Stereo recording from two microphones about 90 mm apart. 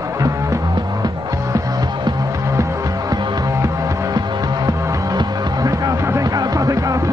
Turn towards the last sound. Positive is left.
turn(degrees=-40)  # may be behind; listen again after turning